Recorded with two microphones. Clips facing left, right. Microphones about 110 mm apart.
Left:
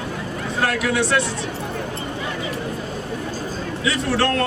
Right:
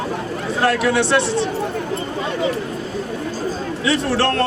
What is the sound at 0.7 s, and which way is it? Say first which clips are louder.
Speech: right 6 dB; 30° right (ahead or behind).